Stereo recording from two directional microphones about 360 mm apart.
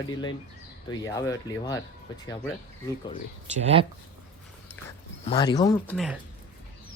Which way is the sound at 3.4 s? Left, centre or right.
Centre.